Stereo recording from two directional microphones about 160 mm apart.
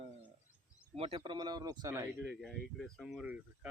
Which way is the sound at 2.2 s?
Centre (ahead or behind).